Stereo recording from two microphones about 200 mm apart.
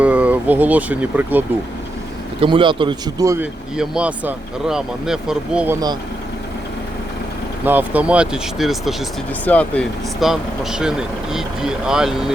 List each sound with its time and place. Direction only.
0.0 s speech: 5° right (ahead or behind)
2.4 s speech: 25° right (ahead or behind)
3.8 s speech: 5° right (ahead or behind)
7.6 s speech: 10° right (ahead or behind)